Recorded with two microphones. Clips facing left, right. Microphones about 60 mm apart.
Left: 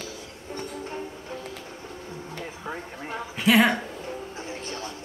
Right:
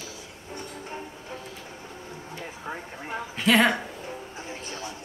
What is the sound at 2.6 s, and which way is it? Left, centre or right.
Music, centre.